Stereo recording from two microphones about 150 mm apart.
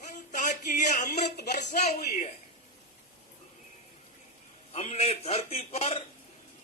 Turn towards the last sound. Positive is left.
turn(degrees=45)  # may be behind; listen again after turning